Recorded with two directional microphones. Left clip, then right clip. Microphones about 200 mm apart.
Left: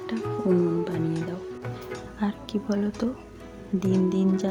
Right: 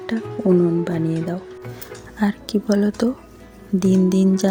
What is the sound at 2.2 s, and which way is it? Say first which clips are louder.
Speech: right 9 dB; 25° right (ahead or behind).